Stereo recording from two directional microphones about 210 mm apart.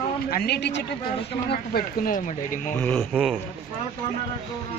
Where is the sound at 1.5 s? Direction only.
45° left (ahead or behind).